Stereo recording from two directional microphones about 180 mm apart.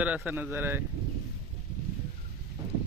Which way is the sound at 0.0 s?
10° right (ahead or behind).